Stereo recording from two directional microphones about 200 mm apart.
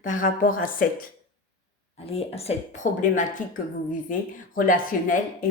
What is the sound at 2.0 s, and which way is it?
Speech, 30° left (ahead or behind).